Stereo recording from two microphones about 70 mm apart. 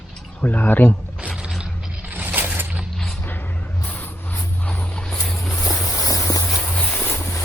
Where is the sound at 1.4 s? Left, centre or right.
Centre.